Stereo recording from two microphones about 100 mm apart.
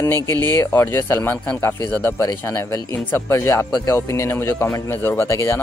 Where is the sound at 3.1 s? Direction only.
25° left (ahead or behind).